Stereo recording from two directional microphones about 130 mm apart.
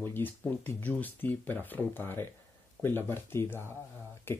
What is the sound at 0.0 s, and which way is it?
Speech, 15° left (ahead or behind).